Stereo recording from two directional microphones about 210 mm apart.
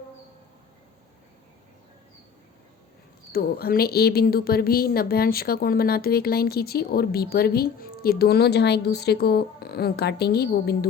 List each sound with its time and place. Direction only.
3.3 s a woman's voice: 45° left (ahead or behind)